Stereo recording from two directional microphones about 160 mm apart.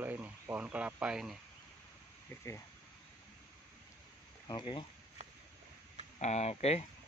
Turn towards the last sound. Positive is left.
turn(degrees=40)  # may be behind; listen again after turning